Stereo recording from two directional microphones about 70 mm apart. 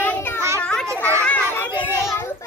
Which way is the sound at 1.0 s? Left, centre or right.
Left.